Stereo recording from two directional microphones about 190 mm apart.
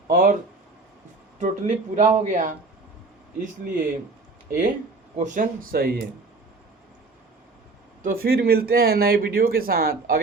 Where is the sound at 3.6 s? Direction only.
45° right (ahead or behind).